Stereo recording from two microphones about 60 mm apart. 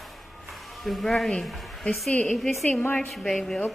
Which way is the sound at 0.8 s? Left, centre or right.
Centre.